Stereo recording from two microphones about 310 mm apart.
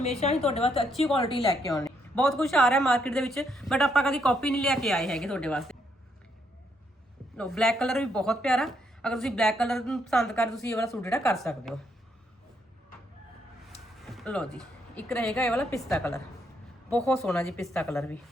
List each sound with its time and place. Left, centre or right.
0.2 s a woman's voice: centre
0.9 s speech: centre
7.3 s speech: centre
14.0 s a woman's voice: centre